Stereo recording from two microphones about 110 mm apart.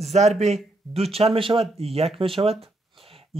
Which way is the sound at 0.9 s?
65° right (ahead or behind).